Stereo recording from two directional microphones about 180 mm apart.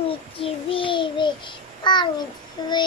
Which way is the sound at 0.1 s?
30° left (ahead or behind).